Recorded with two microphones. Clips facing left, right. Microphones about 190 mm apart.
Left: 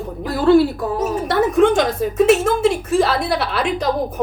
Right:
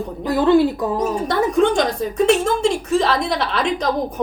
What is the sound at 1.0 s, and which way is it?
A woman's voice, 5° left (ahead or behind).